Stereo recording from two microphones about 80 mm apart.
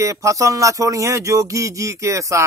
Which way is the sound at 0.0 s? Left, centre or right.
Right.